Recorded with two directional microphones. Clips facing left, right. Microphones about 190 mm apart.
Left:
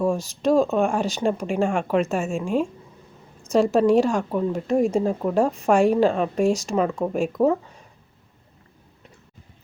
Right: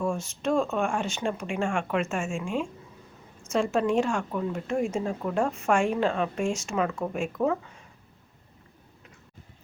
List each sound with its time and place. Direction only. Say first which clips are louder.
0.0 s speech: left 6 dB; 35° left (ahead or behind)